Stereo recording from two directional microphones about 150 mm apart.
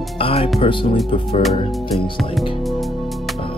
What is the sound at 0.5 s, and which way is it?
Speech, 35° left (ahead or behind).